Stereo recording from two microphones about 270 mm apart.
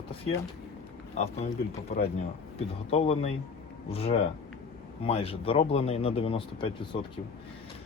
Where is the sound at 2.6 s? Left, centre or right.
Left.